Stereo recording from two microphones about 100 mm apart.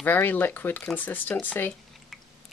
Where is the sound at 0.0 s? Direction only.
20° left (ahead or behind).